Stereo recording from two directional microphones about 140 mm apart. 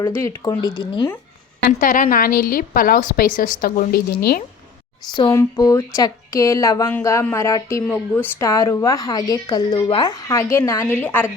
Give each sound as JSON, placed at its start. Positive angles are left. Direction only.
{"t": 0.1, "sound": "a woman's voice", "side_deg": 20}
{"t": 1.8, "sound": "a woman's voice", "side_deg": 70}
{"t": 5.3, "sound": "a woman's voice", "side_deg": 20}